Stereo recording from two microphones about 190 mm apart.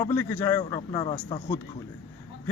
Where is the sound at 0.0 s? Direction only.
15° left (ahead or behind).